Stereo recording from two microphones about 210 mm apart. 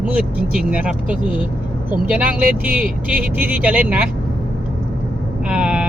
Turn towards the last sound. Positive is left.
turn(degrees=-5)  # may be behind; listen again after turning